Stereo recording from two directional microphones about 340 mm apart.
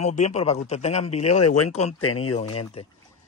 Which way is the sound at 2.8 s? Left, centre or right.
Centre.